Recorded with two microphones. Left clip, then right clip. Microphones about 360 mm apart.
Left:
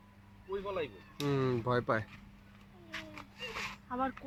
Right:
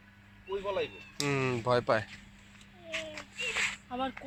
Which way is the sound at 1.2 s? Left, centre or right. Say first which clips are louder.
Right 3 dB; centre.